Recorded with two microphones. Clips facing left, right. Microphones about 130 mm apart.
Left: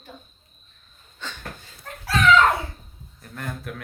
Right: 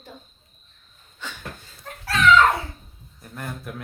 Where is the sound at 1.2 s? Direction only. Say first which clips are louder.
Even; 10° right (ahead or behind).